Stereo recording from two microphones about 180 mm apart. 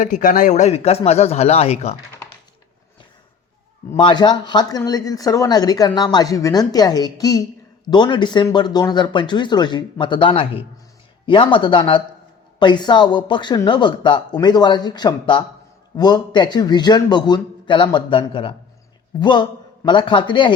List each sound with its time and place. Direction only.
0.0 s speech: 45° left (ahead or behind)
3.9 s speech: 25° left (ahead or behind)